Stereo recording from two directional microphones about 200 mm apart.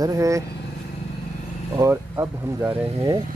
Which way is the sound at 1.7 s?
15° right (ahead or behind).